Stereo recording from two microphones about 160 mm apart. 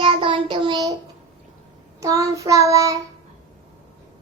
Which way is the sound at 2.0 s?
20° right (ahead or behind).